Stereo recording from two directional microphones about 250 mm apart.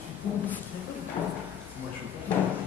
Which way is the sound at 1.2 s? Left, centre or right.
Centre.